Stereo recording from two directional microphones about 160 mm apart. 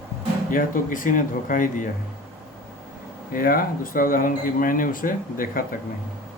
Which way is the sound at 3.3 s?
65° left (ahead or behind).